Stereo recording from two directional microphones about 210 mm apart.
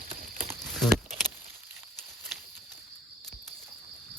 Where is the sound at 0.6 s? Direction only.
Centre (ahead or behind).